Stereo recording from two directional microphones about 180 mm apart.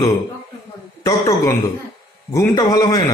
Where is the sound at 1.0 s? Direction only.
15° left (ahead or behind).